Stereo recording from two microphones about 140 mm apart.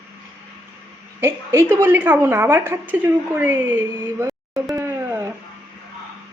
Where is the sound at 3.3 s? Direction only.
15° right (ahead or behind).